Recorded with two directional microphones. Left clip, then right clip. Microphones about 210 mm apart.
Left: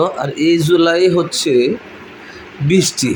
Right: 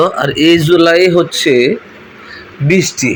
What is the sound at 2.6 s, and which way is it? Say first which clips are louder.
Speech: right 3 dB; 5° left (ahead or behind).